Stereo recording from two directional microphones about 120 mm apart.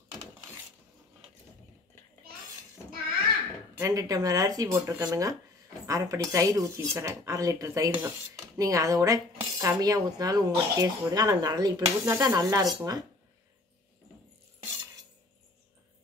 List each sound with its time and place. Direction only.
3.7 s speech: 25° right (ahead or behind)